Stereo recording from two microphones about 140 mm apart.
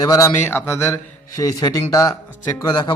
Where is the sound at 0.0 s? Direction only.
25° left (ahead or behind).